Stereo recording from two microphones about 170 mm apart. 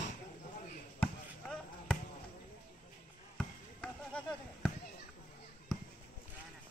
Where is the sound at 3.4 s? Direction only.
5° left (ahead or behind).